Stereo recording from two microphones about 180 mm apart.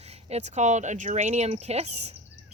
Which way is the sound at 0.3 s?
40° right (ahead or behind).